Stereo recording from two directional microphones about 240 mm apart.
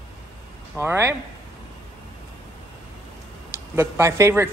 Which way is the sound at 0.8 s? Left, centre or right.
Centre.